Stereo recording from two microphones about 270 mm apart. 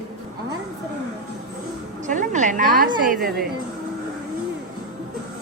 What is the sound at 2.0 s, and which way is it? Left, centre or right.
A woman's voice, right.